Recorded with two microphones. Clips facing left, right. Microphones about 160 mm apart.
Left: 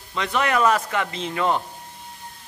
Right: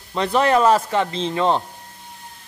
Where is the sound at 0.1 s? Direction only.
35° right (ahead or behind).